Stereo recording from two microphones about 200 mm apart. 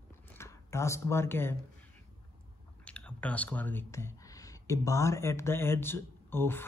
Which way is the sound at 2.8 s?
5° left (ahead or behind).